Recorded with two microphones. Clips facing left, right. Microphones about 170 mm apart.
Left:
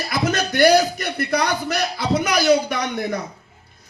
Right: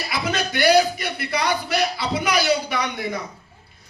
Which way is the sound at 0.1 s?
45° left (ahead or behind).